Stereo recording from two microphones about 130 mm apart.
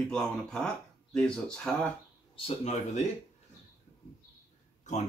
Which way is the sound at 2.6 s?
60° left (ahead or behind).